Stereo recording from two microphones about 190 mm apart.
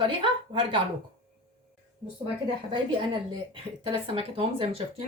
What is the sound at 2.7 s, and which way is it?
Speech, 25° right (ahead or behind).